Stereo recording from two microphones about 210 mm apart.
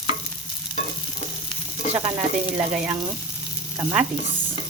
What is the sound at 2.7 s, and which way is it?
Frying, 5° right (ahead or behind).